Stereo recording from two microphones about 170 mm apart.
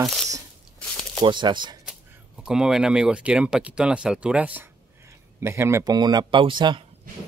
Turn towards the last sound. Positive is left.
turn(degrees=-30)  # may be behind; listen again after turning